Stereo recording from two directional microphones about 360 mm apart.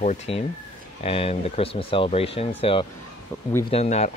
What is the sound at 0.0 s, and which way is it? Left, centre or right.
Speech, centre.